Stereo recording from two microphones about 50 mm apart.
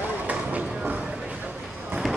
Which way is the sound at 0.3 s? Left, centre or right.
Right.